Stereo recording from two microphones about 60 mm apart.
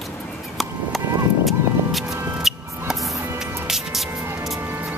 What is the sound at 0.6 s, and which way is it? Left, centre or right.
Music, centre.